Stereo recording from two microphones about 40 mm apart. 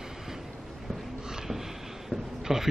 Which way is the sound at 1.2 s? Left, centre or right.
Centre.